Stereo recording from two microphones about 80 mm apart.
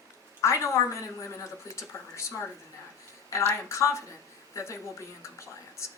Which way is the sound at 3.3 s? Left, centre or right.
Left.